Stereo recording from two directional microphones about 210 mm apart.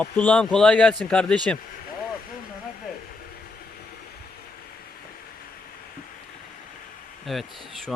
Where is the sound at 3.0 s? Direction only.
45° left (ahead or behind).